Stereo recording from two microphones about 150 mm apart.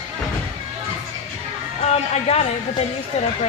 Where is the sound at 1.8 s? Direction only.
45° left (ahead or behind).